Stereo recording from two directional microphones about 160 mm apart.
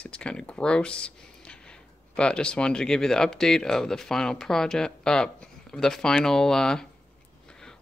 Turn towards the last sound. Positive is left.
turn(degrees=5)  # may be behind; listen again after turning